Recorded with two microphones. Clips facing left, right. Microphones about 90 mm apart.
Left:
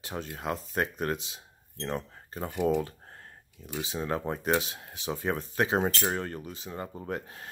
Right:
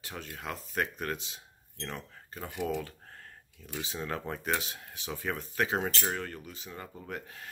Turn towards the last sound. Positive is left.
turn(degrees=30)  # may be behind; listen again after turning